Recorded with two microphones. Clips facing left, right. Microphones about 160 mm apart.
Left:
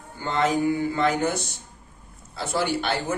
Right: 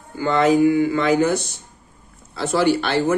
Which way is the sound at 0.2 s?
85° right.